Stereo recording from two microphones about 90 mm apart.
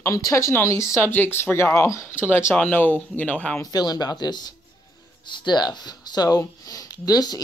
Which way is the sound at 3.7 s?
45° left (ahead or behind).